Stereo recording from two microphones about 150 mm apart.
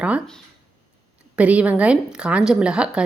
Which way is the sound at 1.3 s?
10° right (ahead or behind).